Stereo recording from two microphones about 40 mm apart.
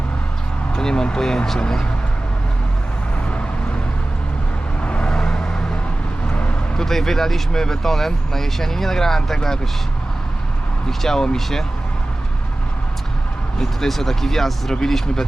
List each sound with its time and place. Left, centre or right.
0.8 s speech: centre
4.8 s vehicle: left
5.1 s vehicle: centre
6.2 s vehicle: left
6.7 s speech: centre
10.8 s speech: centre
13.6 s speech: centre